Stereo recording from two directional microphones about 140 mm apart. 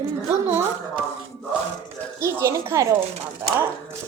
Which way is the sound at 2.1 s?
20° right (ahead or behind).